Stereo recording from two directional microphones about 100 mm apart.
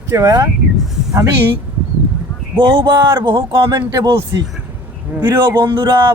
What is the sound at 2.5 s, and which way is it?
Speech, 55° right (ahead or behind).